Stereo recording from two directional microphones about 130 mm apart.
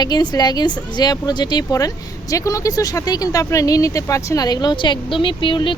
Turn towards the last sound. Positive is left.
turn(degrees=40)  # may be behind; listen again after turning